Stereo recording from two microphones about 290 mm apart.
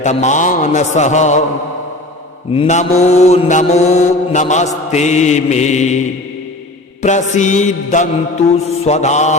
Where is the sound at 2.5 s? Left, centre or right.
Left.